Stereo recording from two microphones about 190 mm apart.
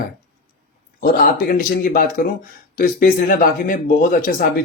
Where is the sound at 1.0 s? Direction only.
50° left (ahead or behind).